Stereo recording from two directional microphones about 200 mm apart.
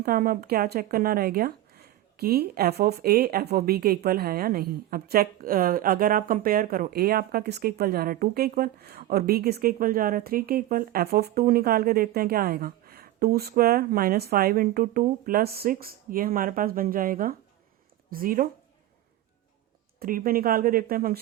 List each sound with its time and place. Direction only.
0.0 s speech: 45° right (ahead or behind)
20.0 s speech: 45° right (ahead or behind)